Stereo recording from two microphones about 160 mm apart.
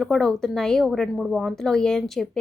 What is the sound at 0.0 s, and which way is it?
A woman's voice, 5° left (ahead or behind).